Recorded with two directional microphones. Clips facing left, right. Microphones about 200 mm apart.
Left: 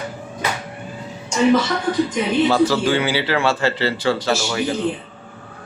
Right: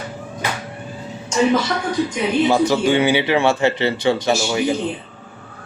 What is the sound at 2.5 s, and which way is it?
Speech, 20° right (ahead or behind).